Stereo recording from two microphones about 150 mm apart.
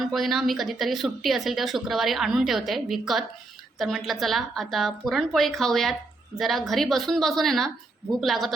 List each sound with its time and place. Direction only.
0.0 s speech: centre (ahead or behind)